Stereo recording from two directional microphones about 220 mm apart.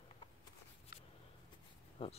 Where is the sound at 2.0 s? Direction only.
25° left (ahead or behind).